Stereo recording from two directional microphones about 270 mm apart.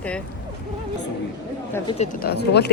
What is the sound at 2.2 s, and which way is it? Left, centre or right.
Speech, left.